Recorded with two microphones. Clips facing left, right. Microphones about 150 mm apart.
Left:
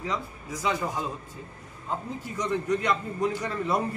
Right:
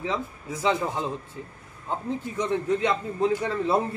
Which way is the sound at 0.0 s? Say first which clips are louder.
Right 3 dB; 25° right (ahead or behind).